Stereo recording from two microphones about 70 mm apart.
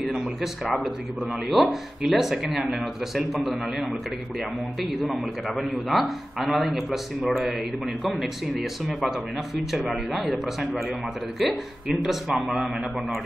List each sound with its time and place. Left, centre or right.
0.0 s a man's voice: centre
4.9 s a man's voice: centre